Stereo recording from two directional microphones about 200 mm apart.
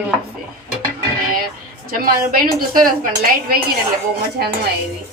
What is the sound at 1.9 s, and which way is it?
Speech, 45° right (ahead or behind).